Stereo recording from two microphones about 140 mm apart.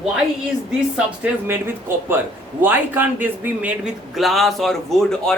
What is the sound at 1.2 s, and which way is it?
Speech, 15° right (ahead or behind).